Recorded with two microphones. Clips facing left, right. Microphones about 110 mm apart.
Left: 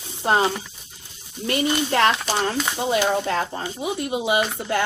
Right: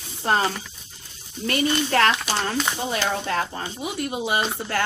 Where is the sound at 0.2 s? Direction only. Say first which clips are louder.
Left 2 dB; 20° left (ahead or behind).